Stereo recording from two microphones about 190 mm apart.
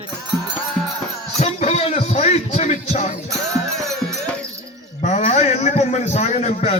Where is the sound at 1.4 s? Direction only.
35° left (ahead or behind).